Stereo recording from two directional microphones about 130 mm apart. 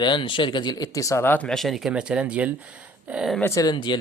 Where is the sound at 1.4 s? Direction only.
Centre (ahead or behind).